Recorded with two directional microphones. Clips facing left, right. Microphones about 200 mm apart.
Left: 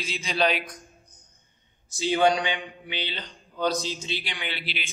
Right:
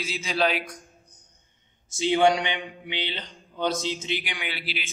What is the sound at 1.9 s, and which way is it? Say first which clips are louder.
Speech: right 1 dB; 20° right (ahead or behind).